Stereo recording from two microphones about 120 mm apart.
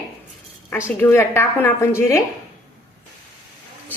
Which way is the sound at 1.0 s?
20° left (ahead or behind).